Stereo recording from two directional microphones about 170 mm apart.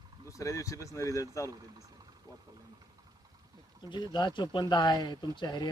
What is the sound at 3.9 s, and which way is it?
Speech, 25° left (ahead or behind).